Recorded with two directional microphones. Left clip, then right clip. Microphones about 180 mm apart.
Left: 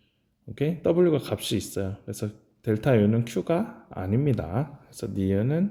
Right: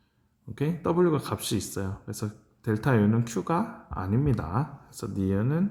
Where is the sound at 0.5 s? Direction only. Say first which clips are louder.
Left 3 dB; 15° left (ahead or behind).